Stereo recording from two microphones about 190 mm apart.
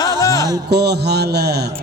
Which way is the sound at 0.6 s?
60° right (ahead or behind).